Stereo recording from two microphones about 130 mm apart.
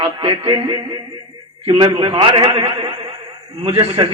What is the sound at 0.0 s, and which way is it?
A man's voice, 40° right (ahead or behind).